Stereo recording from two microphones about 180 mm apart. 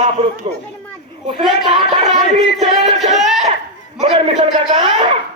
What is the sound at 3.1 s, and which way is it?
Laughter, centre (ahead or behind).